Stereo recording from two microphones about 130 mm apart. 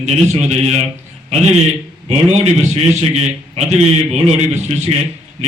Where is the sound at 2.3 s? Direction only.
60° right (ahead or behind).